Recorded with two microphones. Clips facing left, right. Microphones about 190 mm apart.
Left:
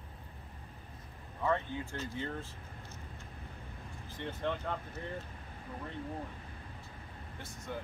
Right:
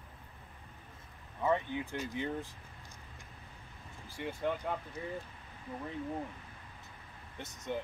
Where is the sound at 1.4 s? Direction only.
15° right (ahead or behind).